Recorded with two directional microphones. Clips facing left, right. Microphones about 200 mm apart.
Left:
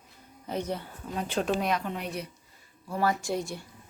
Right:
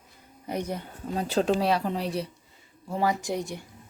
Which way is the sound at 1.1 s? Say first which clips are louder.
Right 4 dB; 35° right (ahead or behind).